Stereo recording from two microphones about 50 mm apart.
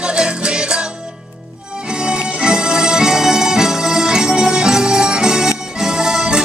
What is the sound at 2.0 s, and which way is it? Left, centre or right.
Music, centre.